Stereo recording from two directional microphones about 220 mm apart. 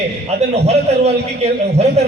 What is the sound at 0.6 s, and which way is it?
A man's voice, 30° right (ahead or behind).